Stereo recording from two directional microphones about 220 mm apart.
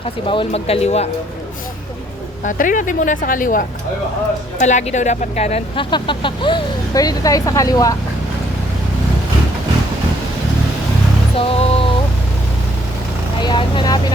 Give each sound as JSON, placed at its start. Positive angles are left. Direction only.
{"t": 0.3, "sound": "speech", "side_deg": 25}
{"t": 2.4, "sound": "speech", "side_deg": 35}
{"t": 11.4, "sound": "a sound", "side_deg": 25}
{"t": 13.4, "sound": "vehicle", "side_deg": 20}